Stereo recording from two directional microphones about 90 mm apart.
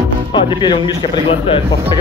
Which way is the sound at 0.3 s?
60° left (ahead or behind).